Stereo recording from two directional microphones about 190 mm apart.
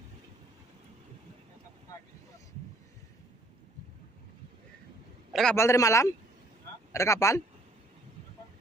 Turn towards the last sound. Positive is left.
turn(degrees=15)  # may be behind; listen again after turning